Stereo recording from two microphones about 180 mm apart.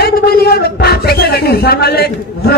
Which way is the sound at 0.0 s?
60° left (ahead or behind).